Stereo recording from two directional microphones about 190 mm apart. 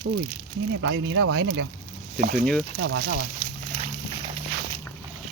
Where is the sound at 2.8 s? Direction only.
90° right.